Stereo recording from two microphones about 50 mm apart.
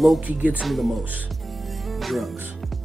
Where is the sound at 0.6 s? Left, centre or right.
Centre.